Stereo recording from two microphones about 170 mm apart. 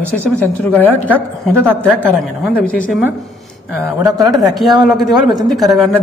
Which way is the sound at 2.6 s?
10° left (ahead or behind).